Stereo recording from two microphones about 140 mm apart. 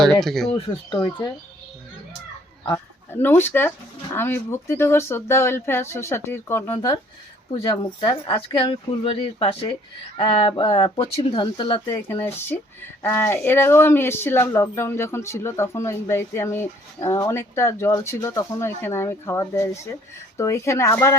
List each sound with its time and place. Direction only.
0.0 s speech: centre (ahead or behind)
0.5 s a woman's voice: 30° left (ahead or behind)
2.6 s speech: 15° left (ahead or behind)
6.7 s speech: 35° left (ahead or behind)
11.9 s a woman's voice: 25° left (ahead or behind)